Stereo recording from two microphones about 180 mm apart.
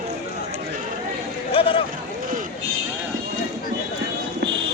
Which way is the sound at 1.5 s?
30° left (ahead or behind).